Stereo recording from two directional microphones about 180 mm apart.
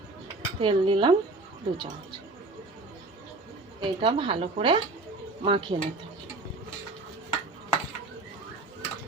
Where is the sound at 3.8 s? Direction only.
30° right (ahead or behind).